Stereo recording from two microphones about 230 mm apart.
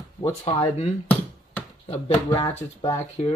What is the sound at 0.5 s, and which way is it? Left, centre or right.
Speech, left.